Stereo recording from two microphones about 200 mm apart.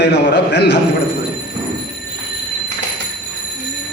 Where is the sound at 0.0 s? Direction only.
60° left (ahead or behind).